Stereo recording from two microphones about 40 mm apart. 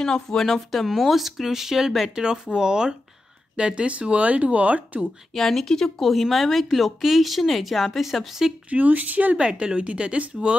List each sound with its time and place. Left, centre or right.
0.0 s speech: centre; by 5.0 s right
5.0 s speech: centre
5.9 s speech: centre
8.6 s speech: right
9.4 s speech: right